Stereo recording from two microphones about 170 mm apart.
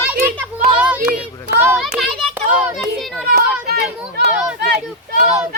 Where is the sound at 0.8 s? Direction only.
10° right (ahead or behind).